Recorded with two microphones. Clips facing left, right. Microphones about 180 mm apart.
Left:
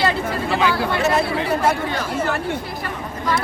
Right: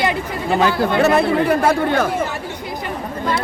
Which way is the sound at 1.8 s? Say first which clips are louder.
Right 7 dB; 55° right (ahead or behind).